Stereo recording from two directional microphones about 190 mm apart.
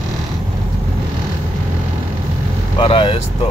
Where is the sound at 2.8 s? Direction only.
30° left (ahead or behind).